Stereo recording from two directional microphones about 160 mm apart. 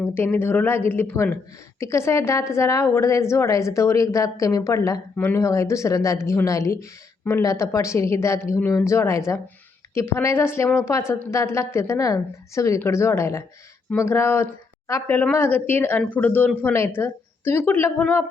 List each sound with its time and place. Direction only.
0.0 s a woman's voice: 15° left (ahead or behind)